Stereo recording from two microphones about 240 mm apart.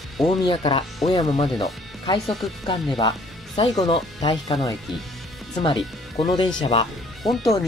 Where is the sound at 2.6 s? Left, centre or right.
Centre.